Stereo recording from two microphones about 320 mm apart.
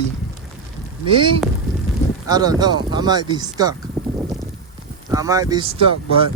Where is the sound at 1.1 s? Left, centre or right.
Centre.